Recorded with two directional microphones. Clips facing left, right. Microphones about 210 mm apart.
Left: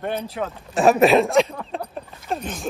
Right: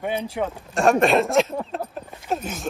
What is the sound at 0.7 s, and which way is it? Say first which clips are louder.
Speech: left 3 dB; centre (ahead or behind).